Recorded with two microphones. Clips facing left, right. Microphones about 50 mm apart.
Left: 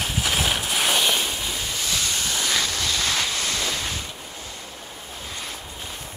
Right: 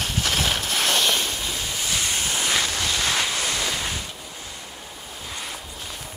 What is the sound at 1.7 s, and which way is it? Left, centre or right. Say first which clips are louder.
Waves: right 1 dB; right.